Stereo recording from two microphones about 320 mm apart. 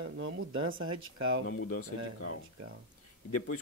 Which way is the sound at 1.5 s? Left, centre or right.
Left.